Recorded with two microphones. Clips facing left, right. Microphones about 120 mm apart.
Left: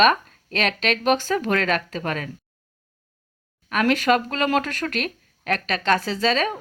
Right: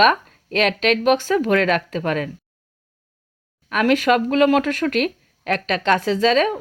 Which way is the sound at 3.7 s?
15° right (ahead or behind).